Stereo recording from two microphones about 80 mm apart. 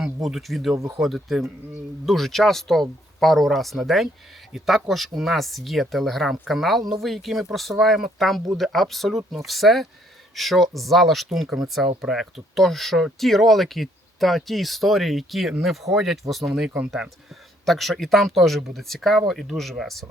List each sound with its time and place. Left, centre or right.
0.0 s speech: centre
16.6 s speech: centre
17.7 s speech: centre